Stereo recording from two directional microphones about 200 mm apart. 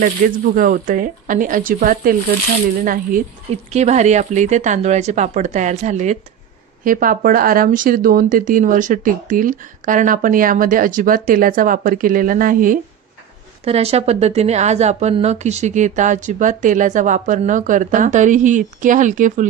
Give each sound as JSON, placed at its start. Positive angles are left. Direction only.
{"t": 0.0, "sound": "a woman's voice", "side_deg": -40}
{"t": 13.7, "sound": "a woman's voice", "side_deg": -30}